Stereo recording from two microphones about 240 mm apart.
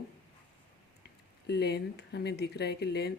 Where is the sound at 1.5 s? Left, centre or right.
Left.